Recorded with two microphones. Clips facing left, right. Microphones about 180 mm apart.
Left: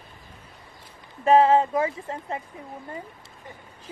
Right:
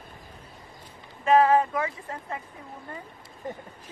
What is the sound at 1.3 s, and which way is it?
Speech, 25° left (ahead or behind).